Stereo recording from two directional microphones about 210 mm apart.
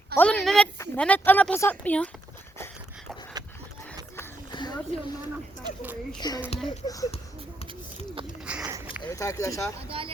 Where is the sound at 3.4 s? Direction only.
20° right (ahead or behind).